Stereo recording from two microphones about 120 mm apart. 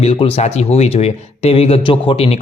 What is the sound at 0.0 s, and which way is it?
Speech, 55° left (ahead or behind).